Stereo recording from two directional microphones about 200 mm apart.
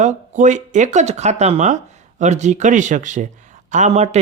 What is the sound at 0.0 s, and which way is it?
Speech, 35° right (ahead or behind).